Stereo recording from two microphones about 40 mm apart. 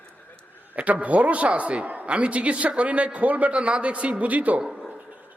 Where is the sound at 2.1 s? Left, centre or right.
Right.